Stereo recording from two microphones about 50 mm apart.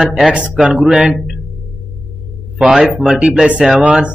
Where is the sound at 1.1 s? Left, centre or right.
Centre.